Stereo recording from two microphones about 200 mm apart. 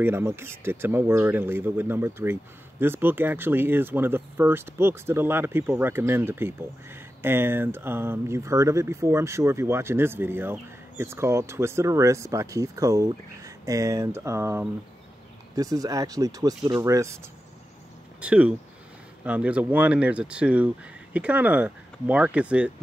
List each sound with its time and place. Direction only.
0.0 s speech: 10° right (ahead or behind)
18.2 s speech: 5° right (ahead or behind)